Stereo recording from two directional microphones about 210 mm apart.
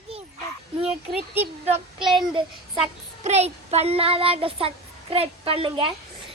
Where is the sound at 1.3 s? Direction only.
30° right (ahead or behind).